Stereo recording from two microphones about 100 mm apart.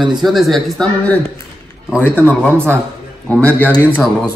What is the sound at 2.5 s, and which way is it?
Speech, 25° right (ahead or behind).